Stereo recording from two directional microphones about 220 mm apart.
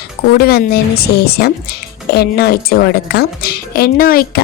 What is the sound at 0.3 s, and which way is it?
A woman's voice, 45° left (ahead or behind).